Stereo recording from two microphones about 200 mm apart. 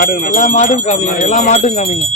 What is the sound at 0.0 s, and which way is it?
Speech, 45° left (ahead or behind).